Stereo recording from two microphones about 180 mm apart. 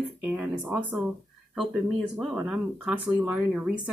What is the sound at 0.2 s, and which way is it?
Speech, 5° right (ahead or behind).